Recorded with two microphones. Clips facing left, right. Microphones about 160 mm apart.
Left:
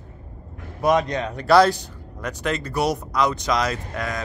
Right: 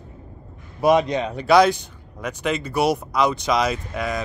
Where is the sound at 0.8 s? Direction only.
10° right (ahead or behind).